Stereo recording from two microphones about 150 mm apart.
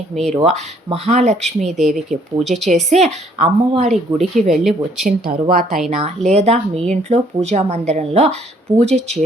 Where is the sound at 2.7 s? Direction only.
50° right (ahead or behind).